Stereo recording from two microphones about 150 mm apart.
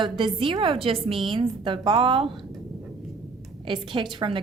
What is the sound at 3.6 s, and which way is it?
Speech, 30° right (ahead or behind).